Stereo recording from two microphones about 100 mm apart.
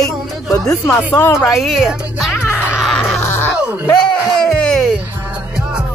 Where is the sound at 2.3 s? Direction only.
25° left (ahead or behind).